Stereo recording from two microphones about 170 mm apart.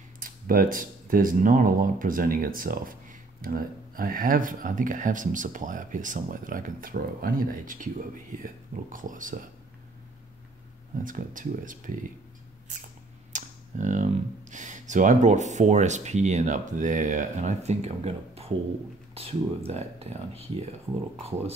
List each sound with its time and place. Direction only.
0.2 s speech: 55° right (ahead or behind)
11.1 s speech: 50° right (ahead or behind)
13.3 s speech: 45° right (ahead or behind)